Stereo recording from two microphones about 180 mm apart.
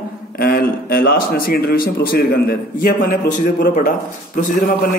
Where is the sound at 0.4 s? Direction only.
55° left (ahead or behind).